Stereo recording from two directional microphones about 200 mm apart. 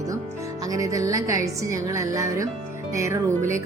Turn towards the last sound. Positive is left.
turn(degrees=-15)  # may be behind; listen again after turning